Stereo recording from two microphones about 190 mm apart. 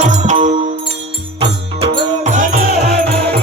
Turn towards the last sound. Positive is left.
turn(degrees=-40)  # may be behind; listen again after turning